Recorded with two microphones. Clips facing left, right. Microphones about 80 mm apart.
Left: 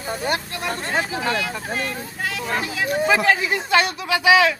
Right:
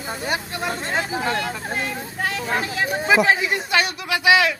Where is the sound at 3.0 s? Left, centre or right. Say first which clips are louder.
Right 2 dB; centre.